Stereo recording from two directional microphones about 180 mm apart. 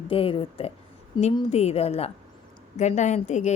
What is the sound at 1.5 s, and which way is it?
A woman's voice, 35° left (ahead or behind).